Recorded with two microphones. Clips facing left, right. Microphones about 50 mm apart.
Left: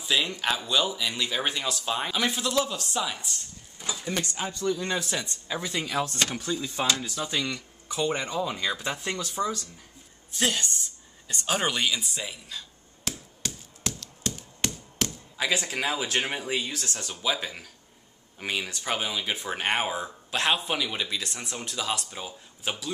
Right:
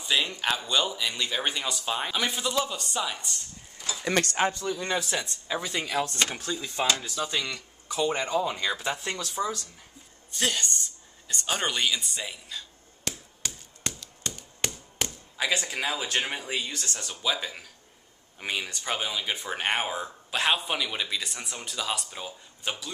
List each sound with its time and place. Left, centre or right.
0.0 s speech: centre
4.0 s speech: right
4.6 s a man's voice: centre
10.3 s a sound: centre
15.0 s speech: centre